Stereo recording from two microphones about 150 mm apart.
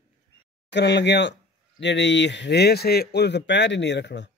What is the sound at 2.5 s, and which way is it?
Speech, 90° left.